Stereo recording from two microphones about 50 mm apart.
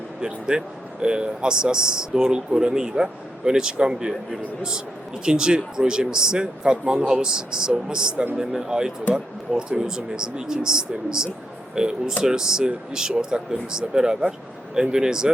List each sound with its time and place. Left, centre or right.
0.2 s speech: centre
5.2 s speech: centre